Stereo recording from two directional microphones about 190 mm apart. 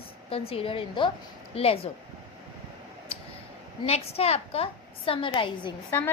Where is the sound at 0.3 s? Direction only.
30° left (ahead or behind).